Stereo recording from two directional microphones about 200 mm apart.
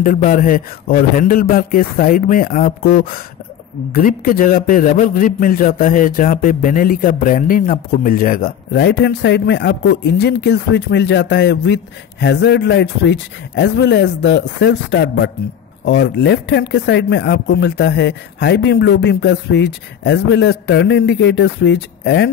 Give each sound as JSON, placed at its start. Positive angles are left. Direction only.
{"t": 0.0, "sound": "a man's voice", "side_deg": 40}